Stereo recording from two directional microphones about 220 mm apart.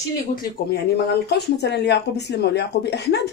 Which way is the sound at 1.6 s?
50° left (ahead or behind).